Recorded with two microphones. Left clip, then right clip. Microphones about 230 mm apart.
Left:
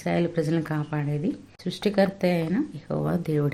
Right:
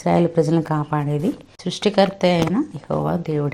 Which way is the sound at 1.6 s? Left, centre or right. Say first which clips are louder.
Right 6 dB; centre.